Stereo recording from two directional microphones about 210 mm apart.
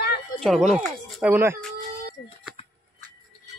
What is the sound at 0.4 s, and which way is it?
Speech, centre (ahead or behind).